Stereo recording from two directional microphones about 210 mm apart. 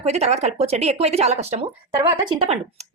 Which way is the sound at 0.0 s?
30° right (ahead or behind).